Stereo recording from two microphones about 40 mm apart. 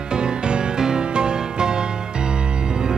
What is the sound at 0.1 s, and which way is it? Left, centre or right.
Music, right.